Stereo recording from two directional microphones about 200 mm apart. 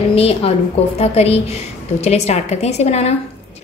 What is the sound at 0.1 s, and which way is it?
A woman's voice, 30° left (ahead or behind).